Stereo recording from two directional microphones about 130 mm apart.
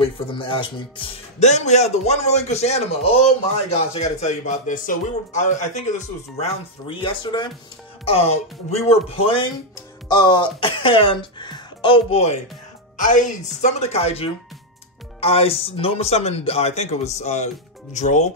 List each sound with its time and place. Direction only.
0.0 s speech: 40° left (ahead or behind)
1.4 s speech: 60° left (ahead or behind); by 7.5 s 35° left (ahead or behind)
8.0 s speech: 50° left (ahead or behind)
12.9 s speech: 75° left (ahead or behind)